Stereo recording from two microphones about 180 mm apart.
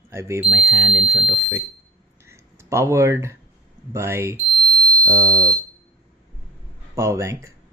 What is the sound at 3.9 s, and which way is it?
Speech, 15° right (ahead or behind).